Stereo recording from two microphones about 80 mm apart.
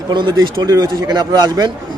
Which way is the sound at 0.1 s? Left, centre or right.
Right.